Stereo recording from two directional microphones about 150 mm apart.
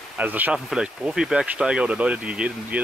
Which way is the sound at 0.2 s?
10° right (ahead or behind).